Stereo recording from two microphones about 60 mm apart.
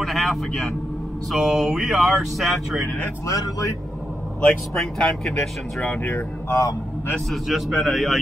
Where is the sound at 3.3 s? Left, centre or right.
Left.